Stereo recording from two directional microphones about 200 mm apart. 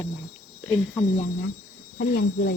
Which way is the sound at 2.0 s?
55° left (ahead or behind).